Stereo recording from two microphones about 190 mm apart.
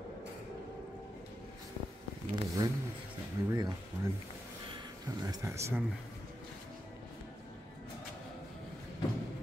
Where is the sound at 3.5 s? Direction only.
20° right (ahead or behind).